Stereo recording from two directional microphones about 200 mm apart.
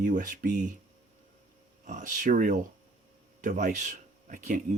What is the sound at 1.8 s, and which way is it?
Speech, 40° right (ahead or behind).